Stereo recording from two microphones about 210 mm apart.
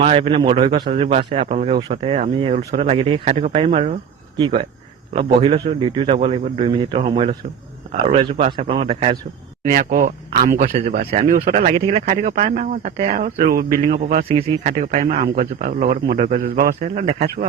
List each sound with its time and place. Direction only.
0.0 s speech: 30° right (ahead or behind)
9.6 s a man's voice: 40° right (ahead or behind)
12.0 s a man's voice: 40° right (ahead or behind)
14.3 s speech: 25° right (ahead or behind)
14.7 s a man's voice: 40° right (ahead or behind)